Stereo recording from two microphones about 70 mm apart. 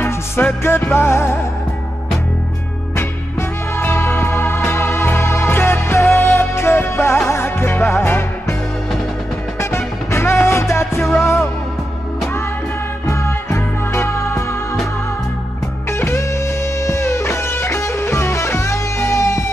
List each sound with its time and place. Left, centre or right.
0.7 s music: left
3.0 s music: left
9.6 s music: left
11.0 s music: centre
13.0 s music: left
15.9 s music: left